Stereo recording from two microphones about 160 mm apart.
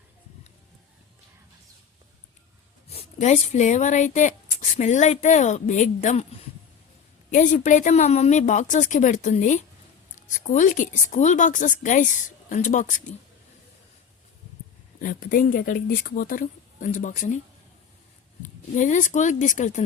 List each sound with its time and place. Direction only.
2.9 s speech: 40° left (ahead or behind)
7.3 s speech: 50° left (ahead or behind)
15.0 s speech: 60° left (ahead or behind)
18.4 s speech: 50° left (ahead or behind)